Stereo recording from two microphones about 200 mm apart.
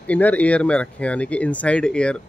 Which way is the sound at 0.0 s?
5° left (ahead or behind).